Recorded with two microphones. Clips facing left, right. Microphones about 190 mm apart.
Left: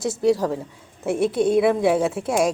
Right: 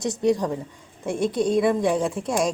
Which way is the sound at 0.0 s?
5° left (ahead or behind).